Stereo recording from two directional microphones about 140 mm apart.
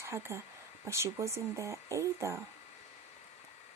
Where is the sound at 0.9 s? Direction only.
20° right (ahead or behind).